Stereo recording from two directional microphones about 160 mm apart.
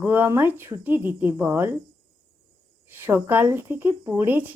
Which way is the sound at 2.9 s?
15° right (ahead or behind).